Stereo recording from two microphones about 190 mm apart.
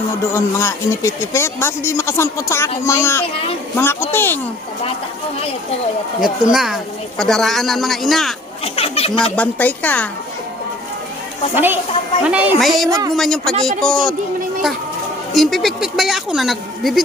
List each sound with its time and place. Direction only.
0.3 s speech: 15° left (ahead or behind)
6.2 s speech: centre (ahead or behind)
8.6 s speech: 30° left (ahead or behind)
9.3 s speech: 10° left (ahead or behind)
11.5 s a woman's voice: 10° right (ahead or behind)
12.9 s speech: 20° right (ahead or behind)
13.1 s speech: centre (ahead or behind)
15.3 s speech: centre (ahead or behind)